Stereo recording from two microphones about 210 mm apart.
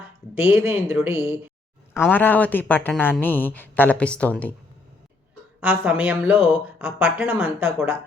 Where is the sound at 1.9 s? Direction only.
10° left (ahead or behind).